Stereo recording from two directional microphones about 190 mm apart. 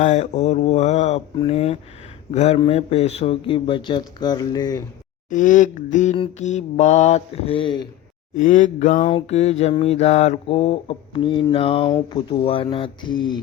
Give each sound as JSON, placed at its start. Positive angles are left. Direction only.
{"t": 0.0, "sound": "mantra", "side_deg": 40}
{"t": 2.6, "sound": "speech", "side_deg": 30}
{"t": 5.3, "sound": "mantra", "side_deg": 40}
{"t": 8.4, "sound": "mantra", "side_deg": 40}
{"t": 12.1, "sound": "speech", "side_deg": 30}